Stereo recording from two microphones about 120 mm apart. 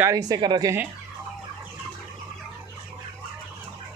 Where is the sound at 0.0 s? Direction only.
30° right (ahead or behind).